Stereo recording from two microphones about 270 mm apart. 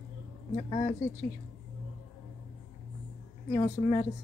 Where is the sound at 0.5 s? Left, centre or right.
Centre.